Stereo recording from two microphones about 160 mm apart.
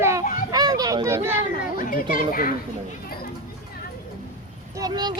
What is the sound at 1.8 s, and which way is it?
Speech, 60° left (ahead or behind).